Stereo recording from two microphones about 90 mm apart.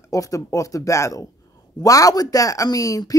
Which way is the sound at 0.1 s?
40° left (ahead or behind).